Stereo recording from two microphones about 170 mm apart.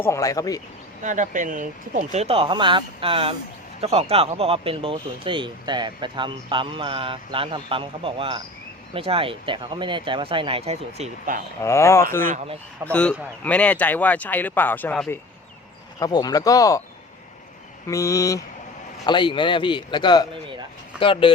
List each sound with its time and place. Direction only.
0.0 s a man's voice: 20° left (ahead or behind)
1.0 s speech: 45° right (ahead or behind)
11.6 s speech: 15° left (ahead or behind)
16.0 s a man's voice: 20° left (ahead or behind)
17.8 s a man's voice: 20° left (ahead or behind)